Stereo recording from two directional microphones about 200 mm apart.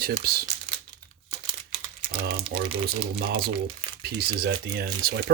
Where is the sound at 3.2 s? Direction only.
50° right (ahead or behind).